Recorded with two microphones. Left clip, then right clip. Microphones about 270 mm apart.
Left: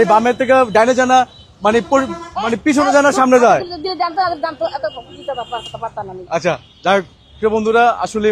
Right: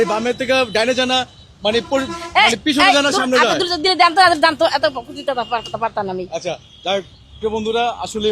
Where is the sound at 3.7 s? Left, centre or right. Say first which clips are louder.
Right 6 dB; right.